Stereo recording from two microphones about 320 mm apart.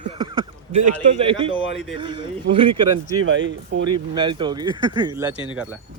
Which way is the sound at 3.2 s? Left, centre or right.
Right.